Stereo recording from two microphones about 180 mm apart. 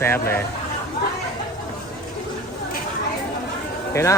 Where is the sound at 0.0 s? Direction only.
10° left (ahead or behind).